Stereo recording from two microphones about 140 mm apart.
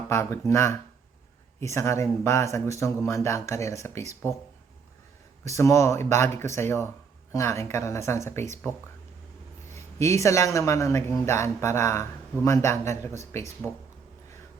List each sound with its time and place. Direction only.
0.1 s speech: 20° left (ahead or behind)
5.5 s speech: 20° left (ahead or behind)
13.6 s speech: 5° left (ahead or behind)